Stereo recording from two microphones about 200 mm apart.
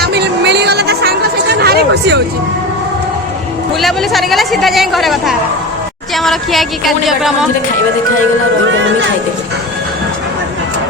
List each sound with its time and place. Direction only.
0.0 s music: 55° right (ahead or behind)
1.5 s a sound: 55° right (ahead or behind)
3.8 s speech: centre (ahead or behind)